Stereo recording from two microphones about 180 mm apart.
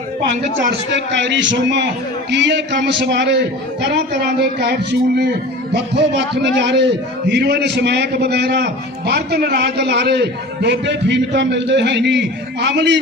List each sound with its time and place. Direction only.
0.7 s a man's voice: 75° right (ahead or behind)